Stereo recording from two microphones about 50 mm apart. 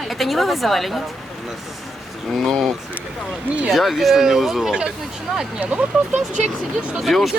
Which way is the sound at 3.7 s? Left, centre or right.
Centre.